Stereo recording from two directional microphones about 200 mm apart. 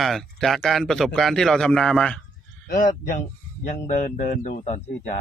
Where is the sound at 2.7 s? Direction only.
40° left (ahead or behind).